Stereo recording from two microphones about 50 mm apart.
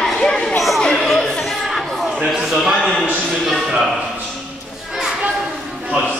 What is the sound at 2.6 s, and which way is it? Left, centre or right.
A man's voice, centre.